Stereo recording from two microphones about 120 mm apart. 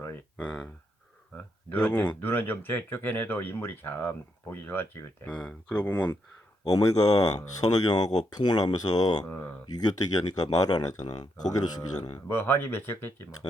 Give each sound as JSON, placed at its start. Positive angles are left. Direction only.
{"t": 0.0, "sound": "a sound", "side_deg": 15}
{"t": 1.4, "sound": "speech", "side_deg": 15}
{"t": 6.7, "sound": "speech", "side_deg": 30}
{"t": 9.2, "sound": "speech", "side_deg": 15}
{"t": 9.7, "sound": "speech", "side_deg": 35}
{"t": 12.3, "sound": "speech", "side_deg": 20}